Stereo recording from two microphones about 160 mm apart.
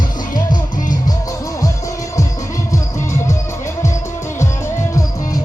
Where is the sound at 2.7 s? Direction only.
15° left (ahead or behind).